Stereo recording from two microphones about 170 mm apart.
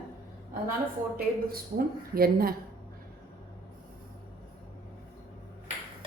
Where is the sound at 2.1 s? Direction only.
60° right (ahead or behind).